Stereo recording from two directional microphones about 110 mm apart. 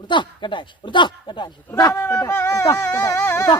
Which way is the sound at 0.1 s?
45° left (ahead or behind).